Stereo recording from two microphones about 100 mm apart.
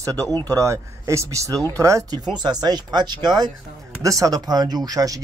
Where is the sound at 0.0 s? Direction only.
35° right (ahead or behind).